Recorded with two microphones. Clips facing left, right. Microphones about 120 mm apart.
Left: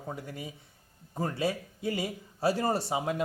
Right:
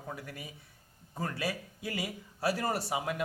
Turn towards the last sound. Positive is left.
turn(degrees=25)  # may be behind; listen again after turning